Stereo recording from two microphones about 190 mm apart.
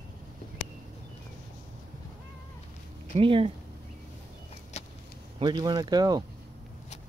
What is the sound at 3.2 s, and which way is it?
Speech, 30° right (ahead or behind).